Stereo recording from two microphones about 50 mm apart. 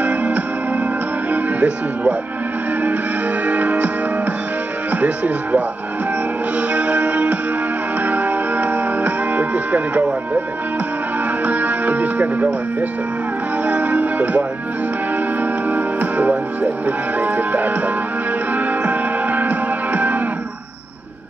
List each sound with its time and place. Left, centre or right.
0.0 s music: right
1.3 s speech: right
3.4 s music: right
4.9 s speech: right
6.7 s music: right
11.4 s speech: right
13.7 s music: right